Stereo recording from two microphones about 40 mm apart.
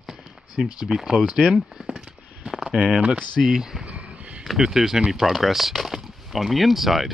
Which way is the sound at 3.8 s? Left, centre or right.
Right.